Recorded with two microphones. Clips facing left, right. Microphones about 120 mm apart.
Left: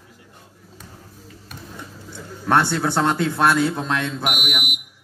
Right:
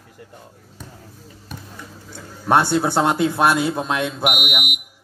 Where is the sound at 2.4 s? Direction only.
15° right (ahead or behind).